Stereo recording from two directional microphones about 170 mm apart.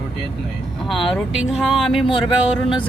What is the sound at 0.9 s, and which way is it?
Speech, centre (ahead or behind).